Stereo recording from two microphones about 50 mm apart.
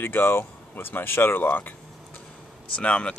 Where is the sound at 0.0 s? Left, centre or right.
Left.